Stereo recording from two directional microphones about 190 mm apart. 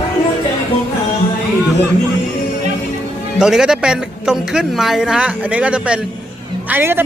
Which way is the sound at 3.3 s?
5° right (ahead or behind).